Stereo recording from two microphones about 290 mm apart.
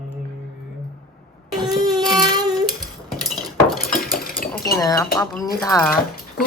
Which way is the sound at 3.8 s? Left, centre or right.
Left.